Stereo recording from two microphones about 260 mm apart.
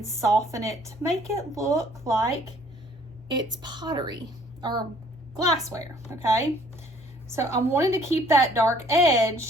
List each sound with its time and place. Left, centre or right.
0.0 s speech: centre